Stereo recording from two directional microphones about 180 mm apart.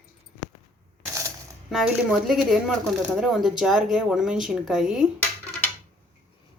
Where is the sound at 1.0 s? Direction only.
15° right (ahead or behind).